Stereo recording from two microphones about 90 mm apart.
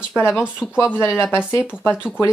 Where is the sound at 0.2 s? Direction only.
30° left (ahead or behind).